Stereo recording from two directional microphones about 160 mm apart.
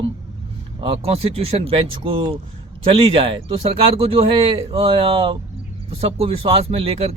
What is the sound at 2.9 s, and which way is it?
Speech, 35° right (ahead or behind).